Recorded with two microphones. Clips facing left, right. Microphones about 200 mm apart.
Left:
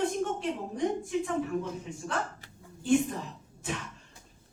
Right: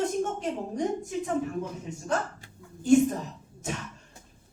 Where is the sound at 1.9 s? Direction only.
45° right (ahead or behind).